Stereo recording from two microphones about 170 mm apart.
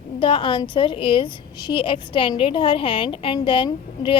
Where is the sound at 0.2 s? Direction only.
30° left (ahead or behind).